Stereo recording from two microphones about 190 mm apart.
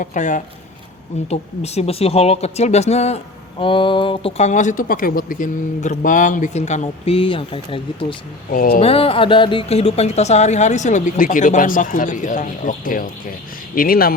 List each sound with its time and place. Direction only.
0.0 s speech: 40° left (ahead or behind)
8.4 s speech: 50° left (ahead or behind)
8.8 s speech: 30° left (ahead or behind); by 14.1 s 50° left (ahead or behind)